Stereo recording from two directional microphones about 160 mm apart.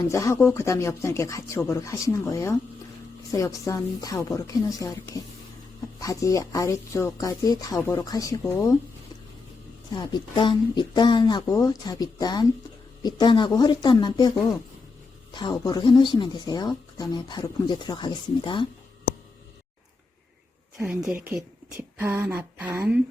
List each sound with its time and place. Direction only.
0.1 s speech: 20° left (ahead or behind)
9.9 s speech: 25° left (ahead or behind)
21.8 s speech: 15° right (ahead or behind)